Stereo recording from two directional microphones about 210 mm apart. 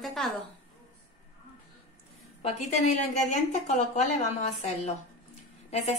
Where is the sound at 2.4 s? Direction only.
35° left (ahead or behind).